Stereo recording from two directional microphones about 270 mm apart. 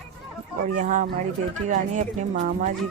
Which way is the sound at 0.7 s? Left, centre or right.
Right.